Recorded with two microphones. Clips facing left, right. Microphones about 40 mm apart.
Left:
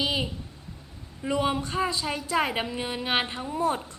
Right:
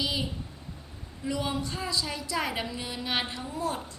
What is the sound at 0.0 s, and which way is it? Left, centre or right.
Speech, left.